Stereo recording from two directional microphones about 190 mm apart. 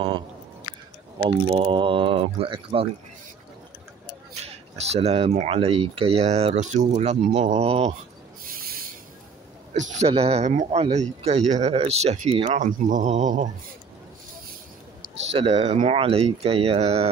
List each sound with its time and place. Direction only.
1.2 s speech: 25° right (ahead or behind)
4.4 s speech: 35° right (ahead or behind)
9.8 s speech: 35° right (ahead or behind)
15.3 s speech: 30° right (ahead or behind)